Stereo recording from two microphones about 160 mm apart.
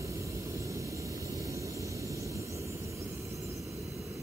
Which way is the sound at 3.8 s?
Centre (ahead or behind).